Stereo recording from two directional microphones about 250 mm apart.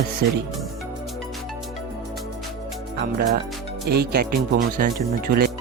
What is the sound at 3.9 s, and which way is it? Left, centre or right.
Speech, right.